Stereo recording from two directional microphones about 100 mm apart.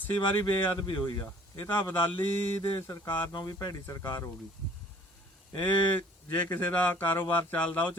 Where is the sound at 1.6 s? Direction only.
20° left (ahead or behind); by 4.0 s 35° left (ahead or behind).